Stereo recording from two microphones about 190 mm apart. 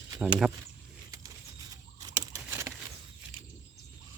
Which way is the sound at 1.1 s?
20° right (ahead or behind).